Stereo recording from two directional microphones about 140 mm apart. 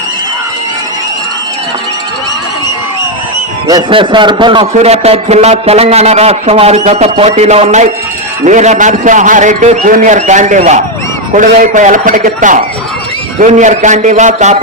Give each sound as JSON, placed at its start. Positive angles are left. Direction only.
{"t": 3.7, "sound": "a man's voice", "side_deg": -35}
{"t": 4.6, "sound": "a man's voice", "side_deg": -50}